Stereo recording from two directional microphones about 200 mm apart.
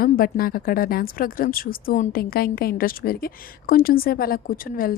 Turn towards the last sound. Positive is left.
turn(degrees=45)  # may be behind; listen again after turning